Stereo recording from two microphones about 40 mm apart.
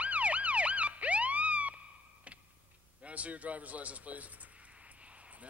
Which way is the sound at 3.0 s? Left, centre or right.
Right.